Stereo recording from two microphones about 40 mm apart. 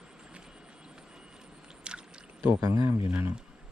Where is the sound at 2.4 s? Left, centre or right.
Right.